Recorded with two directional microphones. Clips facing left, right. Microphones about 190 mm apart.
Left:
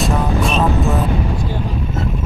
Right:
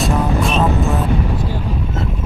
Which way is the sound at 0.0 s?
Centre (ahead or behind).